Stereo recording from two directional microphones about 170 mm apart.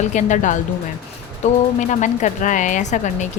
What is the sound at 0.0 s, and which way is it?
Speech, 45° left (ahead or behind).